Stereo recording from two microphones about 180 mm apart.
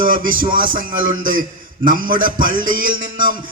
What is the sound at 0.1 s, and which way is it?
Speech, 50° right (ahead or behind).